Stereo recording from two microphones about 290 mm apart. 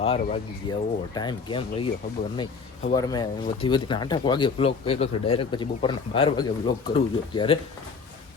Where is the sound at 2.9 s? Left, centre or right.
Centre.